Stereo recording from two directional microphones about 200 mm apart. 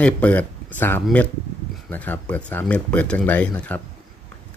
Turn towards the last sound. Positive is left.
turn(degrees=5)  # may be behind; listen again after turning